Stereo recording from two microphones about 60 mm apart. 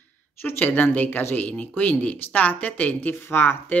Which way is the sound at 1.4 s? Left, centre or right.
Left.